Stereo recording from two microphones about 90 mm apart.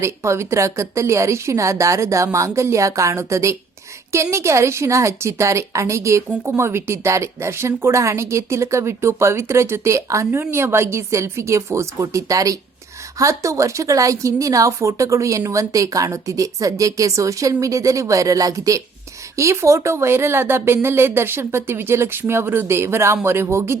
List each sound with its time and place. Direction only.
0.0 s speech: 30° right (ahead or behind)